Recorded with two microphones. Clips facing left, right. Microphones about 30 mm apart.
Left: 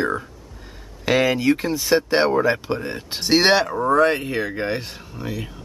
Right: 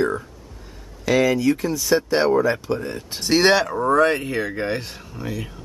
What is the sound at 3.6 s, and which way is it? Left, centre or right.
Speech, centre.